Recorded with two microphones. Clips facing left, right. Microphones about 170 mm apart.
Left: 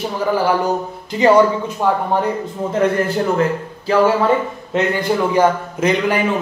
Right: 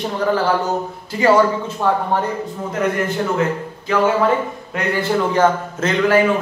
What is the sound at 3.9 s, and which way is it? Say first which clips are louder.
Speech: left 4 dB; 30° left (ahead or behind).